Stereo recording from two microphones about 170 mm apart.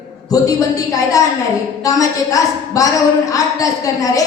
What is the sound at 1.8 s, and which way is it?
A woman's voice, 20° left (ahead or behind).